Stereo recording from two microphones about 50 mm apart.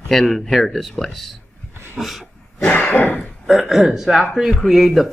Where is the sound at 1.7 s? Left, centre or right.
Right.